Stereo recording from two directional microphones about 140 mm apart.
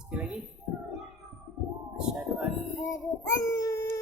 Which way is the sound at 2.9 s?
20° left (ahead or behind).